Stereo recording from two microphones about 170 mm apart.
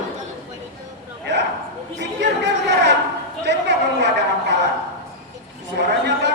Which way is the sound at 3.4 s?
90° right.